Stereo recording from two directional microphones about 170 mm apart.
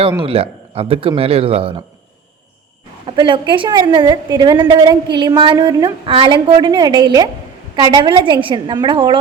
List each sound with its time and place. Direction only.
0.2 s speech: 35° right (ahead or behind)
3.1 s a woman's voice: 30° right (ahead or behind)